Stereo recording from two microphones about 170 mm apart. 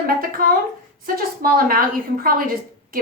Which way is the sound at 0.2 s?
60° right (ahead or behind).